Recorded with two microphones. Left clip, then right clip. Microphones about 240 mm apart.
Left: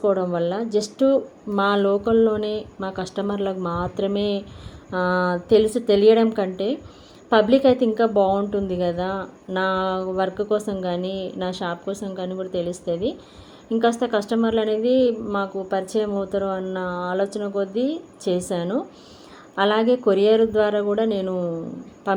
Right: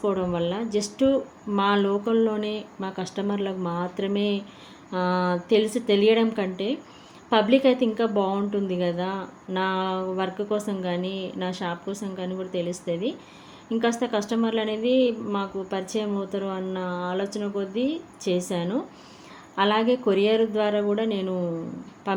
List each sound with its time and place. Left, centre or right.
0.0 s a woman's voice: centre
13.7 s a woman's voice: centre